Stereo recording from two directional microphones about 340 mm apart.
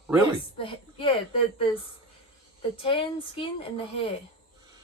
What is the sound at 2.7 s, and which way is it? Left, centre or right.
A woman's voice, centre.